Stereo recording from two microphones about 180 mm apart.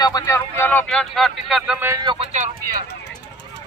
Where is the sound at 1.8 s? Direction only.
20° right (ahead or behind).